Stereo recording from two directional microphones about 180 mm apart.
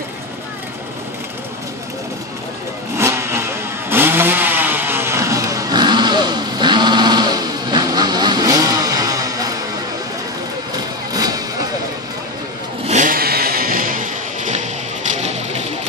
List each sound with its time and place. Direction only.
3.0 s vehicle: 15° right (ahead or behind)
11.1 s a sound: 20° right (ahead or behind)
12.8 s vehicle: 45° right (ahead or behind)